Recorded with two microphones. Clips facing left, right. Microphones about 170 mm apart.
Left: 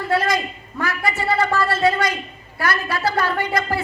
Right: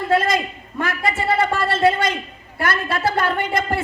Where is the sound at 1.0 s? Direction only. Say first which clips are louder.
Right 1 dB; 25° right (ahead or behind).